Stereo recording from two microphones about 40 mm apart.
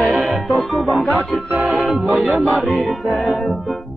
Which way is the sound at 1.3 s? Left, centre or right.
Centre.